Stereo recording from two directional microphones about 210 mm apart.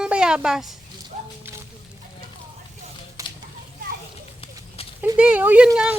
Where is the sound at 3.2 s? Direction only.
15° right (ahead or behind).